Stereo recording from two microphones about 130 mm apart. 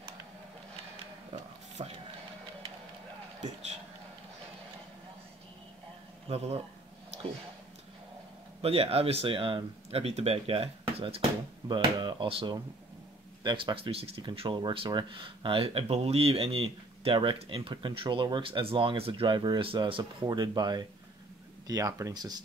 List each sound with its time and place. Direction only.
1.8 s printer: 60° right (ahead or behind)
3.3 s vehicle: 60° right (ahead or behind)
6.2 s a man's voice: 50° right (ahead or behind)
8.5 s speech: 50° right (ahead or behind)
11.6 s speech: 35° right (ahead or behind)